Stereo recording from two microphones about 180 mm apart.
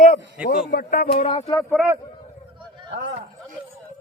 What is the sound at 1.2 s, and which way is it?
Speech, 30° left (ahead or behind).